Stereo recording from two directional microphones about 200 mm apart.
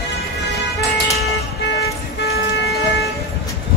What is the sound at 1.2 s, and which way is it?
Emergency vehicle, 55° left (ahead or behind).